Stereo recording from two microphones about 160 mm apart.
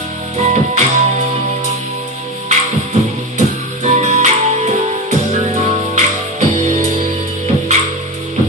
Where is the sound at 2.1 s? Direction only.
45° right (ahead or behind).